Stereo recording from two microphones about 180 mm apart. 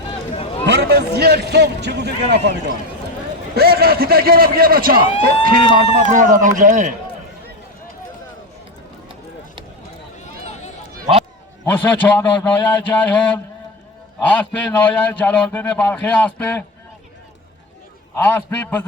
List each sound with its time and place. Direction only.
0.1 s a sound: 35° left (ahead or behind)
0.8 s a man's voice: 65° right (ahead or behind); by 6.9 s 45° right (ahead or behind)
10.4 s run: 40° left (ahead or behind)
11.6 s a man's voice: 10° left (ahead or behind)
18.2 s a man's voice: 10° left (ahead or behind)